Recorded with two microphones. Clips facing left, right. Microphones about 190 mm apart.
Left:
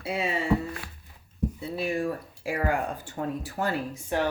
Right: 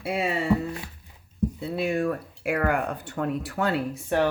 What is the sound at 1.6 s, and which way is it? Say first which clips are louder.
Speech: right 3 dB; 60° right (ahead or behind).